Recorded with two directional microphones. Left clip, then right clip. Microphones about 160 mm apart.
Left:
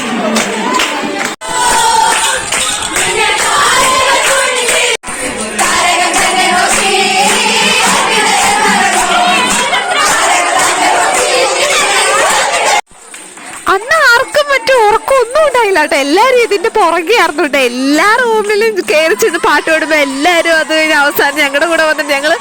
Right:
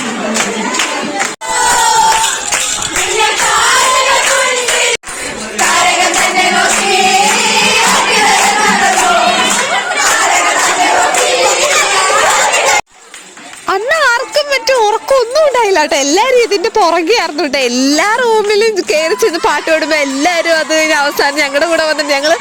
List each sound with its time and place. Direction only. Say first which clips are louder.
13.7 s music: left 3 dB; 35° left (ahead or behind)
16.2 s speech: left 1 dB; 35° left (ahead or behind)
17.7 s speech: even; 10° left (ahead or behind)
18.0 s speech: left 3 dB; 30° left (ahead or behind)